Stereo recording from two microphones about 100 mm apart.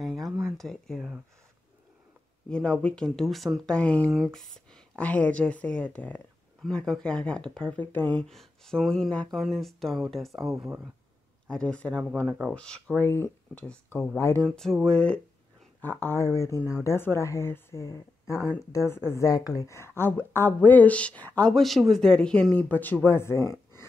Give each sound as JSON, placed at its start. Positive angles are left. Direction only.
{"t": 0.0, "sound": "a sound", "side_deg": 0}
{"t": 0.6, "sound": "speech", "side_deg": 5}
{"t": 2.5, "sound": "speech", "side_deg": 10}
{"t": 6.6, "sound": "speech", "side_deg": 5}
{"t": 8.2, "sound": "speech", "side_deg": 5}
{"t": 10.5, "sound": "speech", "side_deg": -30}
{"t": 11.4, "sound": "speech", "side_deg": 10}
{"t": 13.0, "sound": "a woman's voice", "side_deg": 25}
{"t": 14.5, "sound": "speech", "side_deg": 5}
{"t": 15.8, "sound": "a woman's voice", "side_deg": 20}